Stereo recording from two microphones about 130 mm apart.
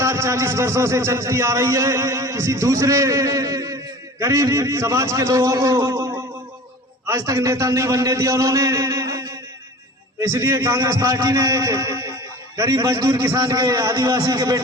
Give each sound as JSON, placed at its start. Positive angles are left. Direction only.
{"t": 0.0, "sound": "a man's voice", "side_deg": -20}